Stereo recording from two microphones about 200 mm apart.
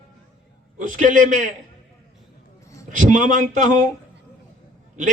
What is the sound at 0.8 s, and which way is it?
Speech, 40° right (ahead or behind).